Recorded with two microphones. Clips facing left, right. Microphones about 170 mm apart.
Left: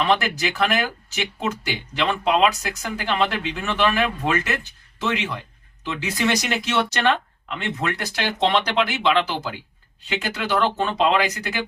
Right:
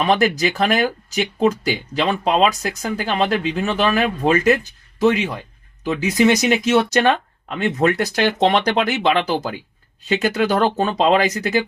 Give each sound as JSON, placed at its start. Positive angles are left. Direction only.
{"t": 0.0, "sound": "speech", "side_deg": -40}
{"t": 6.2, "sound": "speech", "side_deg": -20}
{"t": 6.7, "sound": "speech", "side_deg": -45}